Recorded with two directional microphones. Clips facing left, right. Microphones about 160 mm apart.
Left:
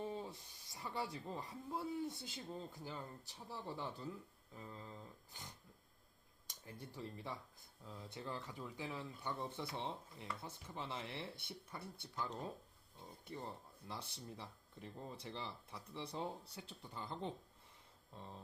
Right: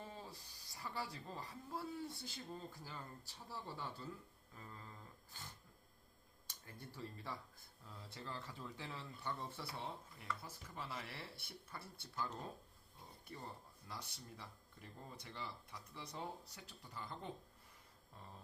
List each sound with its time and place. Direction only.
0.0 s speech: 20° left (ahead or behind)
6.9 s speech: 20° left (ahead or behind)
13.8 s speech: 25° left (ahead or behind)